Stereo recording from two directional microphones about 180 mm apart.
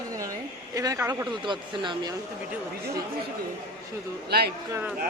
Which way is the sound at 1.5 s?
25° right (ahead or behind).